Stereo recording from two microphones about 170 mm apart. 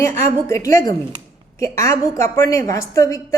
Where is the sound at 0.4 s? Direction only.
20° left (ahead or behind).